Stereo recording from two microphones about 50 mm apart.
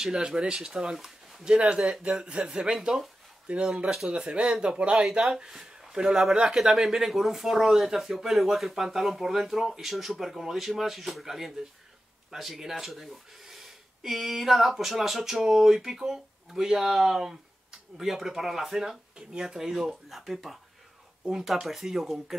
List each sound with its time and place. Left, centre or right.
0.0 s speech: centre
5.2 s speech: centre